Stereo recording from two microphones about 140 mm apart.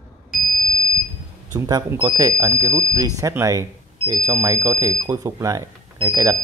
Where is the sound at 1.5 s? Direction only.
30° right (ahead or behind).